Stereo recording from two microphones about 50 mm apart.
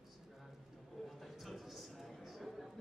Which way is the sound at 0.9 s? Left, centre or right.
Centre.